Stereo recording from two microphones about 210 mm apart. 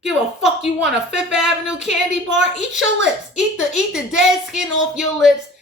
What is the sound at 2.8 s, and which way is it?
Speech, centre (ahead or behind).